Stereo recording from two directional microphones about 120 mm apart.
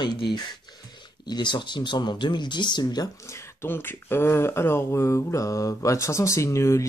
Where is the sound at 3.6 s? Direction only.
20° left (ahead or behind).